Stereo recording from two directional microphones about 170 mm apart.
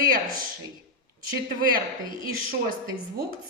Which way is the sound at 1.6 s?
55° right (ahead or behind).